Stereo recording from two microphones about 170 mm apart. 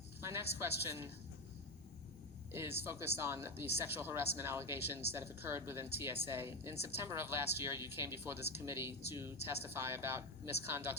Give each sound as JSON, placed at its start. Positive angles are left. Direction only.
{"t": 0.2, "sound": "a woman's voice", "side_deg": -15}
{"t": 2.5, "sound": "a woman's voice", "side_deg": -15}